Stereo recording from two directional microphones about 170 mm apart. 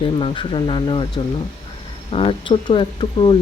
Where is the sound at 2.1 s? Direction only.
35° left (ahead or behind).